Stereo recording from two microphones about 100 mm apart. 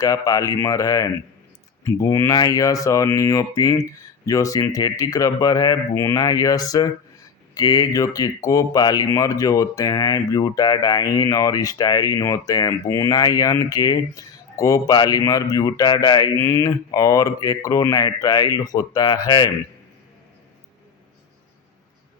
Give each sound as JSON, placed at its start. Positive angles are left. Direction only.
{"t": 0.0, "sound": "speech", "side_deg": 35}